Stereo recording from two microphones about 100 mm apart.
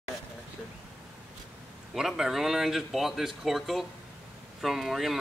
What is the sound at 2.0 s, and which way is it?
Speech, 5° right (ahead or behind).